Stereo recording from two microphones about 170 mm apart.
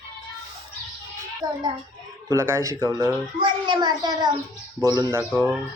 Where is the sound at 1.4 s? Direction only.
25° right (ahead or behind).